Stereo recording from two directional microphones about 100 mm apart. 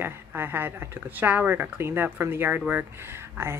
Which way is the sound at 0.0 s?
20° right (ahead or behind).